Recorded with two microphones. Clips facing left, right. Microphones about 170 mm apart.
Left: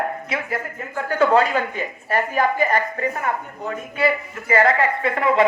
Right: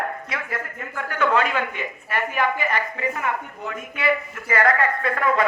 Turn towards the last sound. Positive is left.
turn(degrees=25)  # may be behind; listen again after turning